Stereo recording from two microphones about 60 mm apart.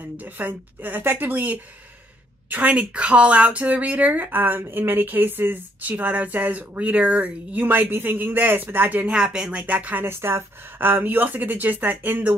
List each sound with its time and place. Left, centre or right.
0.2 s speech: right
7.6 s speech: right
9.1 s speech: centre
9.6 s speech: right